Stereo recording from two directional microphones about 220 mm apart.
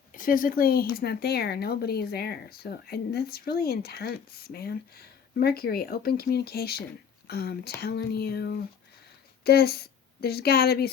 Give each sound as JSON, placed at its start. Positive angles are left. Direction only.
{"t": 0.1, "sound": "a woman's voice", "side_deg": 40}